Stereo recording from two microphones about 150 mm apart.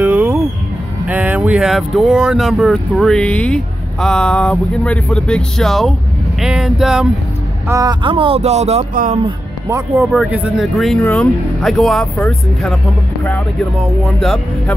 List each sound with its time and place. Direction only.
0.0 s music: 10° right (ahead or behind)
1.0 s speech: 10° right (ahead or behind)
7.6 s speech: 25° right (ahead or behind); by 8.8 s 45° right (ahead or behind)
8.9 s speech: 60° right (ahead or behind)
9.9 s speech: 5° right (ahead or behind)
14.0 s speech: 5° left (ahead or behind)